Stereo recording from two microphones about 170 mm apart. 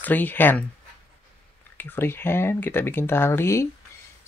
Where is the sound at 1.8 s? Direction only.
10° left (ahead or behind).